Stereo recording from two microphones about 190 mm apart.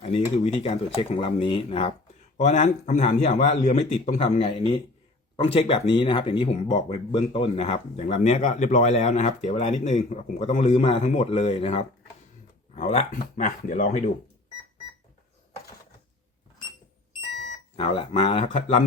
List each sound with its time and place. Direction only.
0.0 s speech: 35° left (ahead or behind)
17.7 s speech: 30° left (ahead or behind)